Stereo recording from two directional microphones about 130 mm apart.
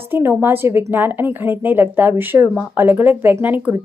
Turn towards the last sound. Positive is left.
turn(degrees=-15)  # may be behind; listen again after turning